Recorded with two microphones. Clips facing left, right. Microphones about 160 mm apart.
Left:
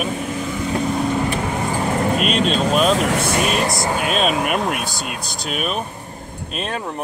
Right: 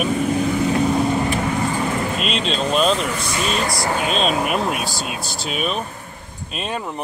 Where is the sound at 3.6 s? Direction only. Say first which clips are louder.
Left 2 dB; 20° left (ahead or behind).